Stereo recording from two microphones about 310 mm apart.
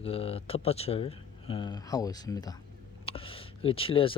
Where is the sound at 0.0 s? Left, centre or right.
Centre.